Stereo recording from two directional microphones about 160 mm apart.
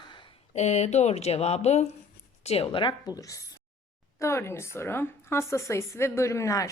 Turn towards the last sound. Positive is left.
turn(degrees=20)  # may be behind; listen again after turning